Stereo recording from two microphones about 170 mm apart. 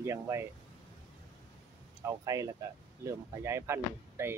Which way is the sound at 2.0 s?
20° right (ahead or behind).